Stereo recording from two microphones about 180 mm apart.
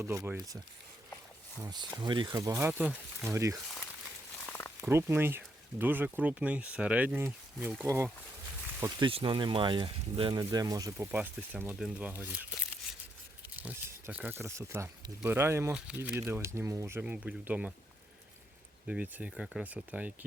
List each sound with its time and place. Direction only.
0.0 s speech: 15° right (ahead or behind)
1.6 s speech: 25° right (ahead or behind)
4.4 s a sound: 10° left (ahead or behind)
4.8 s speech: 15° right (ahead or behind)
9.0 s speech: 30° right (ahead or behind); by 12.5 s 10° right (ahead or behind)
13.6 s speech: 10° right (ahead or behind)
18.9 s speech: 10° right (ahead or behind)